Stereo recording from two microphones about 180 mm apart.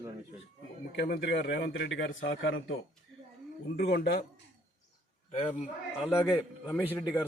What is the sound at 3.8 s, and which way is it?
Speech, 65° left (ahead or behind).